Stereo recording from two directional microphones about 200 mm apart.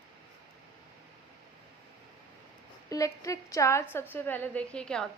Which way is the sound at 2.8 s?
15° left (ahead or behind).